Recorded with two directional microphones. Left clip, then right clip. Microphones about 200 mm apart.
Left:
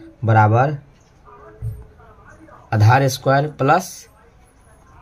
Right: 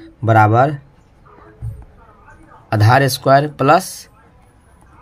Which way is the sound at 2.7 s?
45° right (ahead or behind).